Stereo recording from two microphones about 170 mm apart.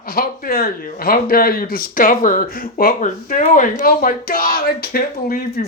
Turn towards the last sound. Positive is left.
turn(degrees=60)  # may be behind; listen again after turning